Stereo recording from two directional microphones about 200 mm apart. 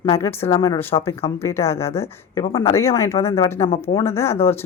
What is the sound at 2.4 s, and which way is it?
Speech, 25° left (ahead or behind).